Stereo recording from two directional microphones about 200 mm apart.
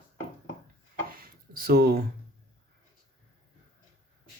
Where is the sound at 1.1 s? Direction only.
45° right (ahead or behind).